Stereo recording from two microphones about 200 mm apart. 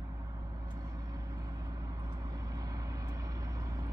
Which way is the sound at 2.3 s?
20° right (ahead or behind).